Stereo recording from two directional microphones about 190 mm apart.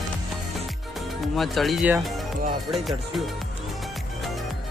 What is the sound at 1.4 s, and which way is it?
Speech, centre (ahead or behind).